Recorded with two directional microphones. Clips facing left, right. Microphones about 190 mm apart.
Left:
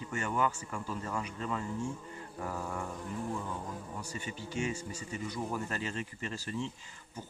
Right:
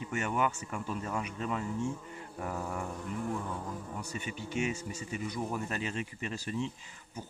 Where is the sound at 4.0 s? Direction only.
20° right (ahead or behind).